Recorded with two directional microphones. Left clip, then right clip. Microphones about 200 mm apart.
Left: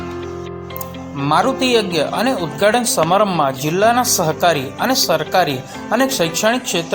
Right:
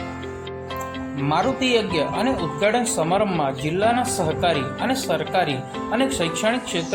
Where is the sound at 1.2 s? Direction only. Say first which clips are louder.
Left 6 dB; 20° left (ahead or behind).